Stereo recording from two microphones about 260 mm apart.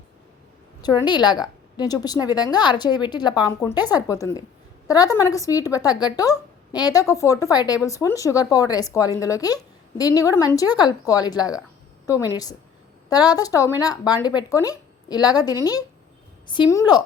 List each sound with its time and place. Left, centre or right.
0.8 s a woman's voice: centre
13.1 s a woman's voice: centre